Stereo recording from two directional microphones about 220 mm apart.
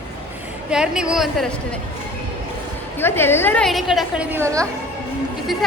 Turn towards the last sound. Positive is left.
turn(degrees=-15)  # may be behind; listen again after turning